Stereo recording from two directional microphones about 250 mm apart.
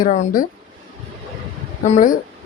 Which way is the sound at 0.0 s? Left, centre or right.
Left.